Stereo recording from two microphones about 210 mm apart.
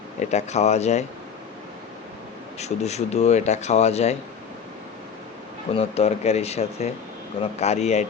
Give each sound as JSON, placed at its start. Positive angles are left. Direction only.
{"t": 0.3, "sound": "speech", "side_deg": 30}
{"t": 2.6, "sound": "speech", "side_deg": 30}
{"t": 5.7, "sound": "speech", "side_deg": 30}